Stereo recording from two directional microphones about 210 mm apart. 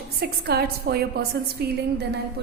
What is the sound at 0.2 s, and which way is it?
A woman's voice, 50° right (ahead or behind).